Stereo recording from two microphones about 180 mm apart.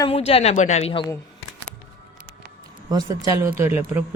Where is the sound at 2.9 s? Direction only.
20° right (ahead or behind).